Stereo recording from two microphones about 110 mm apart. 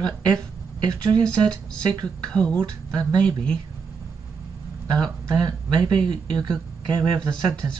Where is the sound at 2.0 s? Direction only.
10° left (ahead or behind).